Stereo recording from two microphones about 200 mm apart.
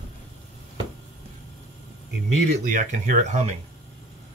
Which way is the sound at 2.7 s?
40° right (ahead or behind).